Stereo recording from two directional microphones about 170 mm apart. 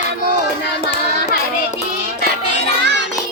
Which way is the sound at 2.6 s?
90° right.